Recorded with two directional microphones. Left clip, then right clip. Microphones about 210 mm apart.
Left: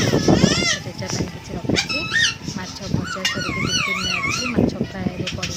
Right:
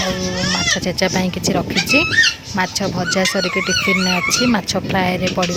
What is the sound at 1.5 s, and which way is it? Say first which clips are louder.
Speech: right 5 dB; 45° right (ahead or behind).